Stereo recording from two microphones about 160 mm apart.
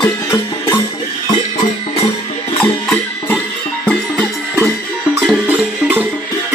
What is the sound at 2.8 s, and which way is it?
Music, 10° left (ahead or behind).